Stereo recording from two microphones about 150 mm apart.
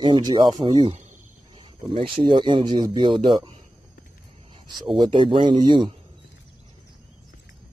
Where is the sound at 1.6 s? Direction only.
35° right (ahead or behind).